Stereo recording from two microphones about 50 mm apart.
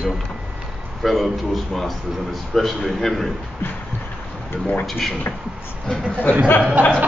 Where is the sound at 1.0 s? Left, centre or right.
Centre.